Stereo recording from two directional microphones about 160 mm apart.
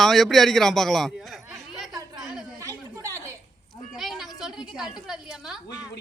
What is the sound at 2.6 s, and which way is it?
Chatter, 20° right (ahead or behind).